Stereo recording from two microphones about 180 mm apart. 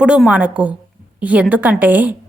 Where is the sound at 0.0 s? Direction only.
5° right (ahead or behind).